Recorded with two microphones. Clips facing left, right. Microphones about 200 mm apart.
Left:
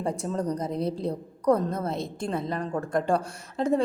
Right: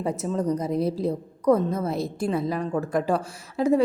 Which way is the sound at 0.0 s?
5° right (ahead or behind).